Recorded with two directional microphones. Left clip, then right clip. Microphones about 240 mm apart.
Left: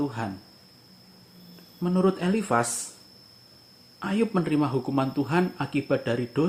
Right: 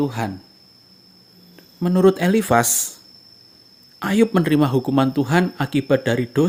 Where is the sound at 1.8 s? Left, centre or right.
Right.